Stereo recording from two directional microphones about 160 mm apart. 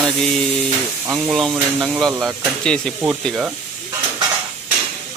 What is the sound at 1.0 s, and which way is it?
Speech, 20° right (ahead or behind).